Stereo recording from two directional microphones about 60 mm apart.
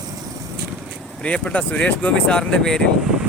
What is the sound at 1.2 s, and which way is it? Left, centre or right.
Speech, left.